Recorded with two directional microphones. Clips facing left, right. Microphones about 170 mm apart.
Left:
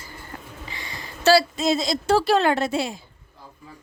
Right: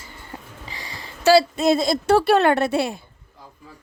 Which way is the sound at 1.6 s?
55° right (ahead or behind).